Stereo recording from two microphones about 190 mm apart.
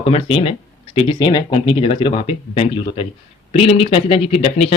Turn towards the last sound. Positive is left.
turn(degrees=30)  # may be behind; listen again after turning